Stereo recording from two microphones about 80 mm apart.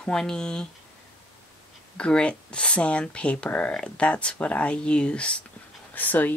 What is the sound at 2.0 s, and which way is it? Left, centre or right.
Speech, centre.